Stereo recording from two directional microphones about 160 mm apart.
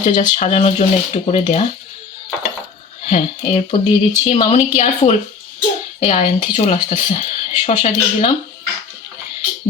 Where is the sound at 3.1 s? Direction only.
40° left (ahead or behind).